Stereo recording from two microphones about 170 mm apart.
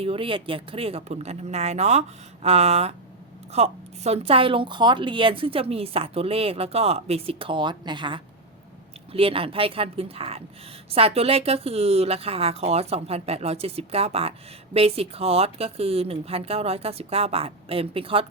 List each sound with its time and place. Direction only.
0.0 s speech: 35° right (ahead or behind)